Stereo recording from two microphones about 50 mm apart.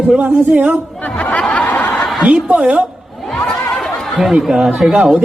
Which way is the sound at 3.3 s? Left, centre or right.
Centre.